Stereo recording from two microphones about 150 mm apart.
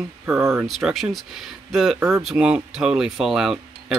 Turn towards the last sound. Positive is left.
turn(degrees=0)  # may be behind; listen again after turning